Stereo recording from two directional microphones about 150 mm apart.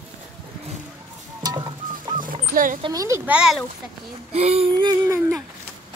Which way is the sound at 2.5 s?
65° right (ahead or behind).